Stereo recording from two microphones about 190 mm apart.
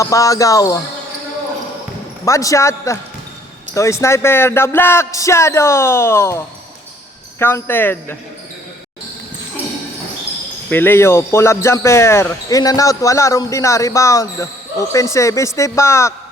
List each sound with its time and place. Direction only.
0.0 s speech: 15° left (ahead or behind)
2.2 s speech: 15° left (ahead or behind)
10.7 s speech: 10° left (ahead or behind)